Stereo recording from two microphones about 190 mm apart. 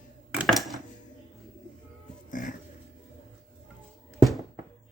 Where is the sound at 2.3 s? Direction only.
45° left (ahead or behind).